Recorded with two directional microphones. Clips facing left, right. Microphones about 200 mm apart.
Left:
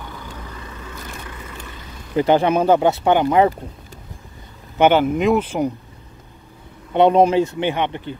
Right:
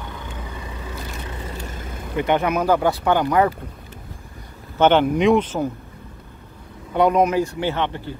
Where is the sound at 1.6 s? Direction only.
50° right (ahead or behind).